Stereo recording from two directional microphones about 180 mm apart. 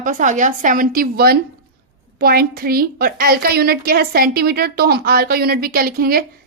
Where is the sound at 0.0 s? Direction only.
45° right (ahead or behind).